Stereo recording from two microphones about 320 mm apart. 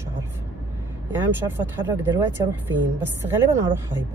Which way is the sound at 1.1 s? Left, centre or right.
Centre.